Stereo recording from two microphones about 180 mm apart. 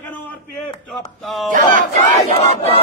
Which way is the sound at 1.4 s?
45° right (ahead or behind).